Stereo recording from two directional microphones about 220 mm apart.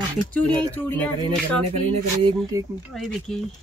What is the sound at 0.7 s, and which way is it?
Speech, 10° left (ahead or behind).